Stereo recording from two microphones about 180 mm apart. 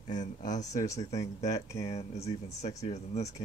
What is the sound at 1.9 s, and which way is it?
Speech, 35° left (ahead or behind).